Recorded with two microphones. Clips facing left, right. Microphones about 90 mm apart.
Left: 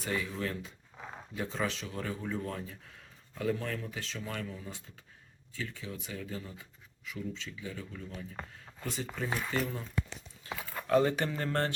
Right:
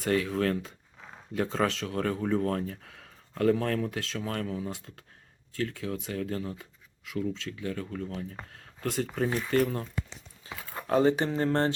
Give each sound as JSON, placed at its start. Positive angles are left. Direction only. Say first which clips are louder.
{"t": 0.0, "sound": "speech", "louder": "right 8 dB", "side_deg": -65}
{"t": 0.9, "sound": "a sound", "louder": "left 7 dB", "side_deg": 15}
{"t": 1.3, "sound": "speech", "louder": "right 7 dB", "side_deg": -65}
{"t": 10.8, "sound": "speech", "louder": "right 3 dB", "side_deg": -30}